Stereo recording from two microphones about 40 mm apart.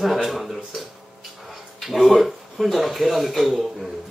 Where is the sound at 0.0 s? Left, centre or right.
Centre.